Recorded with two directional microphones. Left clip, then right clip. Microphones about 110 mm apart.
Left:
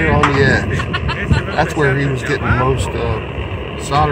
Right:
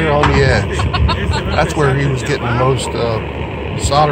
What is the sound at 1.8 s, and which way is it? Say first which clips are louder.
Speech: even; 15° left (ahead or behind).